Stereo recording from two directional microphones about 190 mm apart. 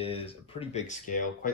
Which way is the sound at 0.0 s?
30° left (ahead or behind).